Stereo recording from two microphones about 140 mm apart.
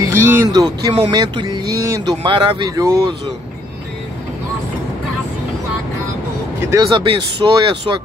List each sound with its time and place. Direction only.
0.1 s speech: 15° right (ahead or behind)
6.7 s speech: 25° right (ahead or behind)